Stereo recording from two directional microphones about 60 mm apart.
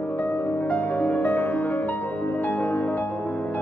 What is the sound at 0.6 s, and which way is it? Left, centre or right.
Music, left.